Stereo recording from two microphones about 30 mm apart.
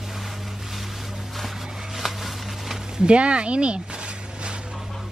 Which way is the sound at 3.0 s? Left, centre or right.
Right.